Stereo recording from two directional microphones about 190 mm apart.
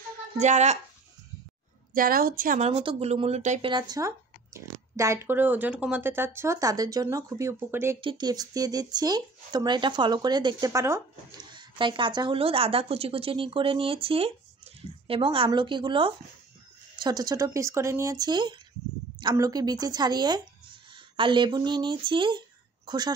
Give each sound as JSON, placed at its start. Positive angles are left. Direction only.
{"t": 0.4, "sound": "speech", "side_deg": -35}
{"t": 2.0, "sound": "a woman's voice", "side_deg": -50}
{"t": 2.7, "sound": "speech", "side_deg": -30}
{"t": 3.7, "sound": "speech", "side_deg": -20}
{"t": 8.0, "sound": "speech", "side_deg": -25}